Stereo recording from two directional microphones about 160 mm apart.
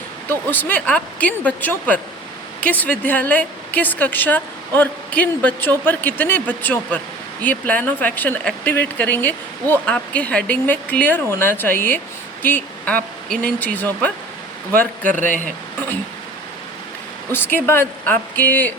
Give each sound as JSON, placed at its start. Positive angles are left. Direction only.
{"t": 0.3, "sound": "speech", "side_deg": 10}
{"t": 14.8, "sound": "speech", "side_deg": -55}
{"t": 17.3, "sound": "speech", "side_deg": 15}